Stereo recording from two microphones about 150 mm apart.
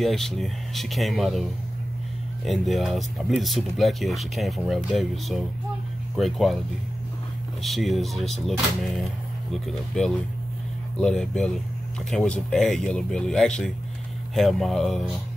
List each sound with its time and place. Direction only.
0.0 s speech: centre (ahead or behind)
7.6 s speech: centre (ahead or behind)